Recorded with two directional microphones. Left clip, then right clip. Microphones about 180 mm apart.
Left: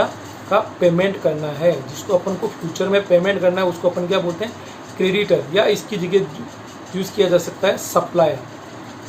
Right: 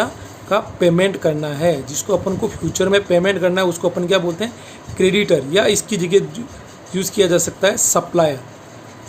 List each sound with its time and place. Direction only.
0.5 s a man's voice: 60° right (ahead or behind)